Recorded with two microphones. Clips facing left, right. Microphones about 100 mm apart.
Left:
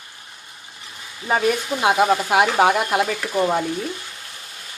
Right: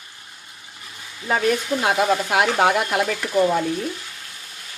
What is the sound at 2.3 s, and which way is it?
Speech, centre (ahead or behind).